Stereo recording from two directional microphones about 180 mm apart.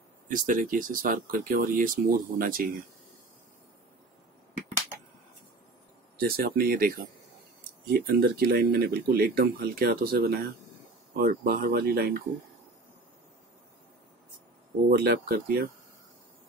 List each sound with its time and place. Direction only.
0.3 s speech: 50° right (ahead or behind)
6.1 s speech: 55° right (ahead or behind)
7.9 s speech: 60° right (ahead or behind)
14.9 s speech: 55° right (ahead or behind)